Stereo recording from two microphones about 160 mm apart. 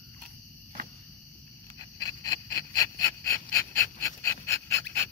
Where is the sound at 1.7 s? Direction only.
25° left (ahead or behind).